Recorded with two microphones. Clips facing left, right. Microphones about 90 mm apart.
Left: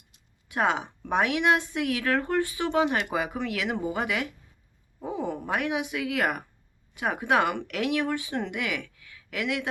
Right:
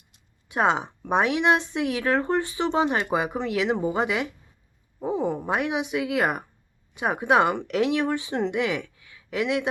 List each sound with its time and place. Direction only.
0.4 s speech: 20° right (ahead or behind)